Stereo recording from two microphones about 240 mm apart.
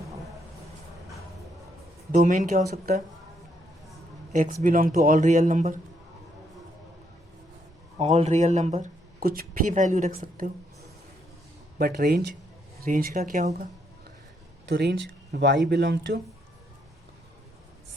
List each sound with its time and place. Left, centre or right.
2.1 s a man's voice: right
4.3 s a man's voice: right
7.9 s speech: right
11.8 s a man's voice: right
14.7 s speech: right